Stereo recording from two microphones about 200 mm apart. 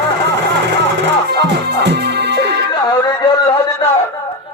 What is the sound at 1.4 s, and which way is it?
Music, 55° right (ahead or behind).